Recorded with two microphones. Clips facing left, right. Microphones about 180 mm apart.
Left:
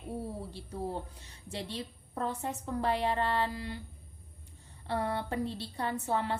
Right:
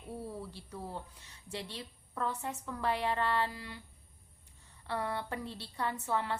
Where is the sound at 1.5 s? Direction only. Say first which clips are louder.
Left 4 dB; 30° left (ahead or behind).